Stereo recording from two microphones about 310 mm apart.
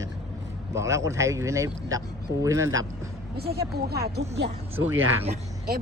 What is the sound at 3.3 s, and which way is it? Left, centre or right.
Speech, right.